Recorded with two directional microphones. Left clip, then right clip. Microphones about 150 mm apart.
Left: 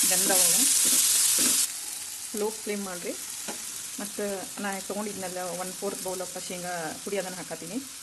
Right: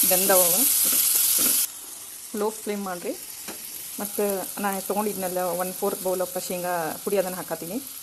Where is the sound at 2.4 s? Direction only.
15° right (ahead or behind).